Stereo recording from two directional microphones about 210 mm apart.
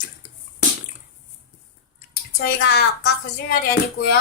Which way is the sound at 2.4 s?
50° left (ahead or behind).